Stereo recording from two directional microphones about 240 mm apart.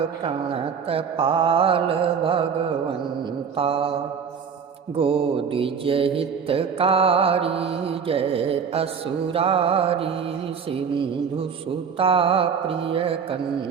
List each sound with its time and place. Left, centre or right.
0.3 s mantra: right
3.6 s mantra: right
4.9 s mantra: right
11.9 s mantra: right